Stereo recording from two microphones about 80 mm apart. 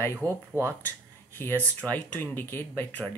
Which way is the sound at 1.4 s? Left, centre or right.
Left.